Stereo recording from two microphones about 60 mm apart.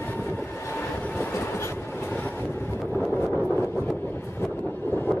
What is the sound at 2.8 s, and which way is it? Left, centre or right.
Vehicle, centre.